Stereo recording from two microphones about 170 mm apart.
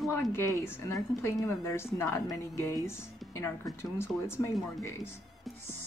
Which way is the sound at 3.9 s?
15° left (ahead or behind).